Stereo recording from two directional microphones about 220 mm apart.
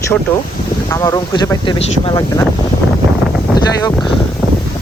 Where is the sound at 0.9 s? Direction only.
15° left (ahead or behind).